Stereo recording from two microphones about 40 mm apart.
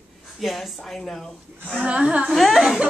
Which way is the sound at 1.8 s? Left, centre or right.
Right.